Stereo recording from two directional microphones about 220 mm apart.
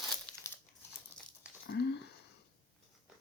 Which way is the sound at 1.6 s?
50° left (ahead or behind).